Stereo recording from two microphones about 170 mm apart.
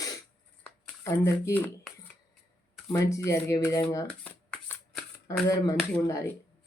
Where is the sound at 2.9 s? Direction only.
15° left (ahead or behind).